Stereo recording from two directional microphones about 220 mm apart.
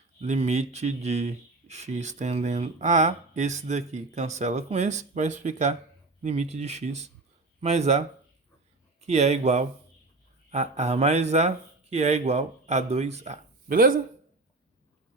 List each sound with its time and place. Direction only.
0.2 s a man's voice: 30° right (ahead or behind)